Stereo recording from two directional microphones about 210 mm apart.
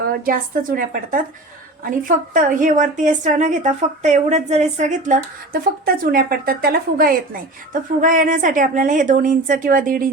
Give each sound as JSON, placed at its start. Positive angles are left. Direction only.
{"t": 0.0, "sound": "a woman's voice", "side_deg": -40}